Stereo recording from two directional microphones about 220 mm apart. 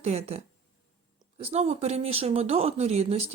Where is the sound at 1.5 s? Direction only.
30° right (ahead or behind).